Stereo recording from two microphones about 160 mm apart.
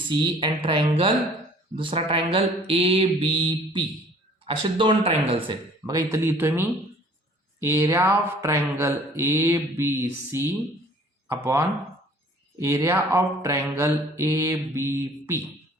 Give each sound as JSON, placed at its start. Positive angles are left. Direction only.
{"t": 0.1, "sound": "mantra", "side_deg": -30}
{"t": 5.3, "sound": "speech", "side_deg": -30}
{"t": 7.6, "sound": "mantra", "side_deg": -15}